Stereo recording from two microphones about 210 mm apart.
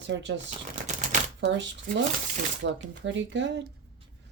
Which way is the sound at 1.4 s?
60° right (ahead or behind).